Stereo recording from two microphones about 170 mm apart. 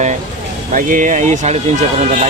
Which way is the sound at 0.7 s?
50° right (ahead or behind).